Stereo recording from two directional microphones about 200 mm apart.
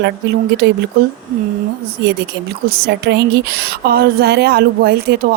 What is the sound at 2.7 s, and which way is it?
A woman's voice, 50° right (ahead or behind).